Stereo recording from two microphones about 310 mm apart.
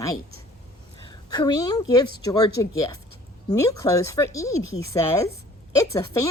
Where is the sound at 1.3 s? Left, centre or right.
Centre.